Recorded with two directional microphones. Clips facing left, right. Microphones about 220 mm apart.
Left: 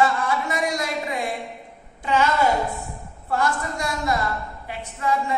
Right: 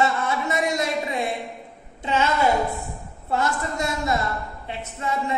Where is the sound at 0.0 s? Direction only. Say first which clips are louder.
Left 1 dB; 25° right (ahead or behind).